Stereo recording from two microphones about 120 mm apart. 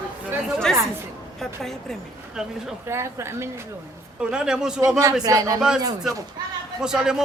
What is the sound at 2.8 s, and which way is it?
Speech, 20° right (ahead or behind).